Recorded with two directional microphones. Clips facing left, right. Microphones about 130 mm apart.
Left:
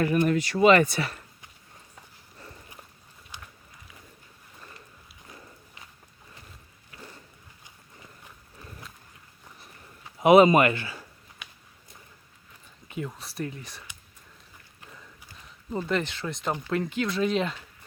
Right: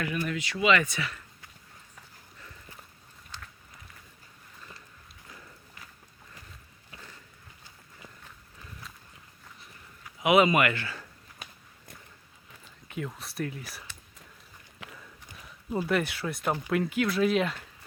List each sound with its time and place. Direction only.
0.3 s speech: 40° left (ahead or behind)
3.3 s run: 15° left (ahead or behind)
6.9 s a sound: 25° right (ahead or behind)
10.2 s speech: 35° left (ahead or behind)
10.8 s speech: 15° left (ahead or behind)
11.4 s walk: 40° right (ahead or behind)
12.9 s speech: centre (ahead or behind)
14.8 s a sound: 90° right
15.7 s speech: 10° right (ahead or behind)